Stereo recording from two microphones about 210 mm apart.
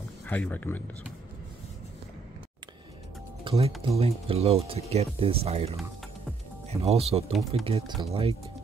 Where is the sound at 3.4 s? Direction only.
25° right (ahead or behind).